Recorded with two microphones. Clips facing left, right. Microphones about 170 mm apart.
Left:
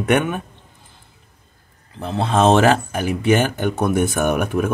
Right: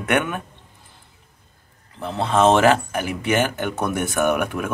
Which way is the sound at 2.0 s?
25° left (ahead or behind).